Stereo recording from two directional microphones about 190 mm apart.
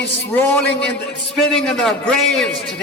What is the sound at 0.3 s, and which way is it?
A man's voice, 10° left (ahead or behind).